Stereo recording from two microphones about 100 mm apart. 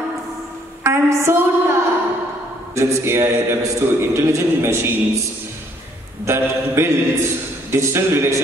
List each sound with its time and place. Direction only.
0.8 s a woman's voice: 25° right (ahead or behind)
6.2 s a man's voice: 25° right (ahead or behind)